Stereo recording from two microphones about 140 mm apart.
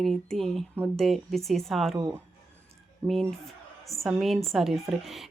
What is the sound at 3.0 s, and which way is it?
Speech, 20° right (ahead or behind).